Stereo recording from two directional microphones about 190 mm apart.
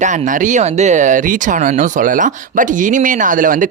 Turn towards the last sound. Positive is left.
turn(degrees=-45)  # may be behind; listen again after turning